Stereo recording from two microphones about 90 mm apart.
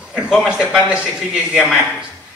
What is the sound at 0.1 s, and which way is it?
A man's voice, 5° right (ahead or behind).